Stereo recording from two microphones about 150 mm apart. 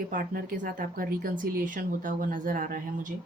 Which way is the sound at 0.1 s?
65° right (ahead or behind).